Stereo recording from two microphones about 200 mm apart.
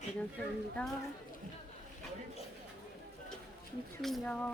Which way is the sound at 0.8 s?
5° left (ahead or behind).